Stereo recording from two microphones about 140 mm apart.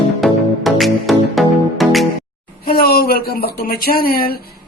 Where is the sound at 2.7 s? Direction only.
90° left.